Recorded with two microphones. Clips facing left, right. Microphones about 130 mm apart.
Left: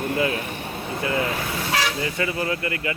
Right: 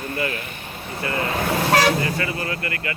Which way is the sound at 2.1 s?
20° left (ahead or behind).